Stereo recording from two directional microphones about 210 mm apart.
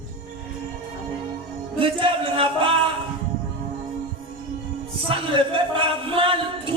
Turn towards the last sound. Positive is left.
turn(degrees=-25)  # may be behind; listen again after turning